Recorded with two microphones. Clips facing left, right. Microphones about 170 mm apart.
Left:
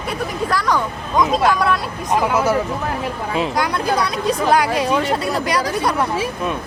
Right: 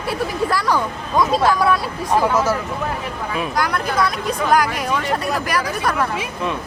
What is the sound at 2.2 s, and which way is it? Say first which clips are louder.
Speech: left 2 dB; 10° left (ahead or behind).